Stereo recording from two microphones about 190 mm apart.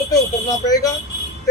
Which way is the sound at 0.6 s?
20° left (ahead or behind).